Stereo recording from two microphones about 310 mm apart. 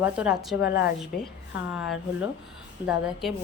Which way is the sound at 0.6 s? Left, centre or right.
Left.